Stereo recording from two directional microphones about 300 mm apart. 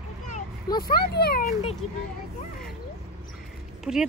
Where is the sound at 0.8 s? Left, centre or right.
Left.